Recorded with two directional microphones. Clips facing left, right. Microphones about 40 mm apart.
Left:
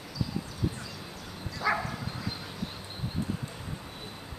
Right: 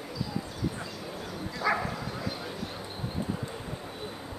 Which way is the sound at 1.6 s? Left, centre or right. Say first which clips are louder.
Right 1 dB; centre.